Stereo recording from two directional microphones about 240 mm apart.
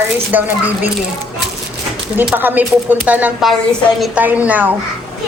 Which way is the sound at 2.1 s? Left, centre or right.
Centre.